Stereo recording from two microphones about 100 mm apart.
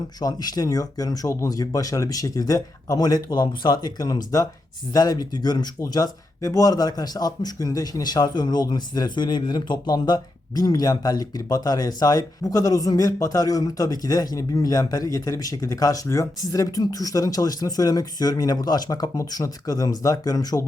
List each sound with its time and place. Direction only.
0.2 s speech: 40° left (ahead or behind)